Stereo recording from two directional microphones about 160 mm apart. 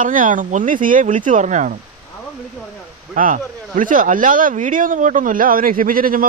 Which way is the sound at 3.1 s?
55° right (ahead or behind).